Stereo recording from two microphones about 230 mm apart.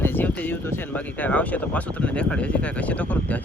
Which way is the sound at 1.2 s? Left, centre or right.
Centre.